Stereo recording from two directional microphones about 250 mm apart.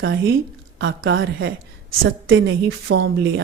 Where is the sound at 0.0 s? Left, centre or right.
Right.